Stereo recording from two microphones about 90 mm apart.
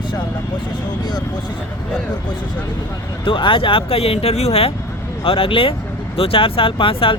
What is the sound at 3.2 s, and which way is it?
Speech, 70° left (ahead or behind).